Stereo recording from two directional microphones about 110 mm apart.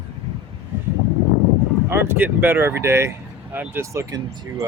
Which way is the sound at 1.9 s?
20° right (ahead or behind).